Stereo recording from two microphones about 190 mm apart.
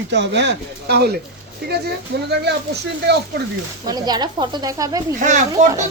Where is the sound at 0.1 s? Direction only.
65° right (ahead or behind).